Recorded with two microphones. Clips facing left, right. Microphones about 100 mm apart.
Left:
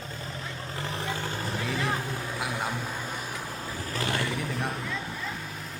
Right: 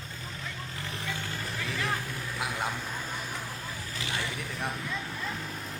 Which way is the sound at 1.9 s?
25° left (ahead or behind).